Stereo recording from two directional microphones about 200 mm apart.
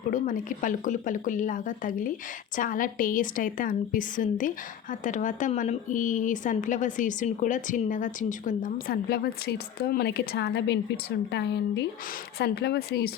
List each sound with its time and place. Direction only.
0.1 s a woman's voice: 40° left (ahead or behind)